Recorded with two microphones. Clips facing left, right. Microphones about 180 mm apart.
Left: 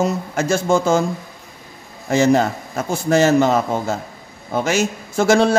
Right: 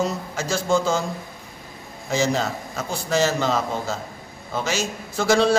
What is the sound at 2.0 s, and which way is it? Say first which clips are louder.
A man's voice: left 7 dB; 55° left (ahead or behind).